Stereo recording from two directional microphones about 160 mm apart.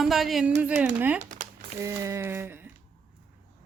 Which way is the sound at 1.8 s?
15° right (ahead or behind).